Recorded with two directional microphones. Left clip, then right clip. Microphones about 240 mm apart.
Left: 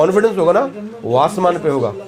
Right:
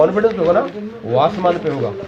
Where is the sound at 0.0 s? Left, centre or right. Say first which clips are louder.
Left 1 dB; left.